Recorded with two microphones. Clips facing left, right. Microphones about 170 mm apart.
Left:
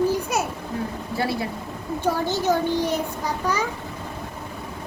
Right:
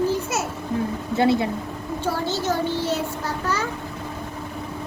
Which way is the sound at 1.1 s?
20° right (ahead or behind).